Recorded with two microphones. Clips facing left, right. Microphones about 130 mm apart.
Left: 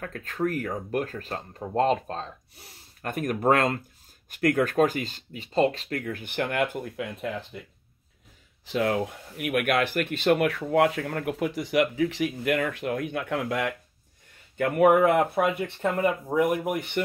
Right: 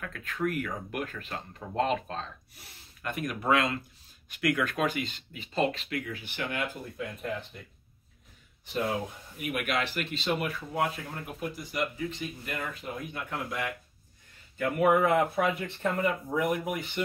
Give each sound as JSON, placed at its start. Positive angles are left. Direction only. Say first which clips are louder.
{"t": 0.0, "sound": "speech", "louder": "left 3 dB", "side_deg": 40}
{"t": 8.6, "sound": "speech", "louder": "left 5 dB", "side_deg": 85}
{"t": 15.6, "sound": "speech", "louder": "left 4 dB", "side_deg": 55}